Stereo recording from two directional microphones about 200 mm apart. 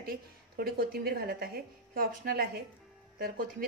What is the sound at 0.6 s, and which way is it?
A woman's voice, 50° right (ahead or behind).